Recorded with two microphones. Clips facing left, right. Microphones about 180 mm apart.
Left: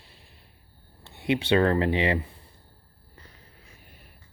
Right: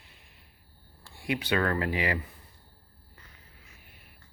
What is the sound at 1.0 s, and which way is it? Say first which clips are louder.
Speech: left 6 dB; 20° left (ahead or behind).